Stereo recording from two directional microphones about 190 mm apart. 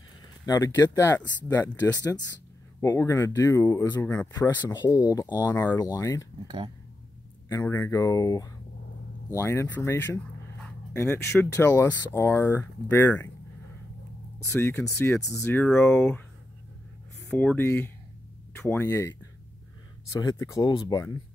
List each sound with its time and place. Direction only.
0.5 s speech: 15° left (ahead or behind)
6.4 s speech: 25° right (ahead or behind)
7.4 s speech: 15° left (ahead or behind)
14.4 s speech: 10° left (ahead or behind)
17.3 s speech: 5° left (ahead or behind)